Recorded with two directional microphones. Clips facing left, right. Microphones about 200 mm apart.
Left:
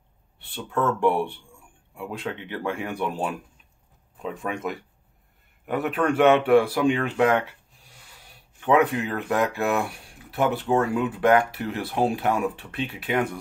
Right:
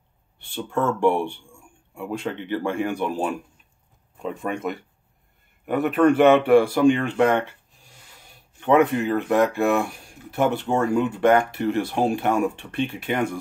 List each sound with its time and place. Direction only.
0.4 s speech: centre (ahead or behind)
8.5 s speech: centre (ahead or behind)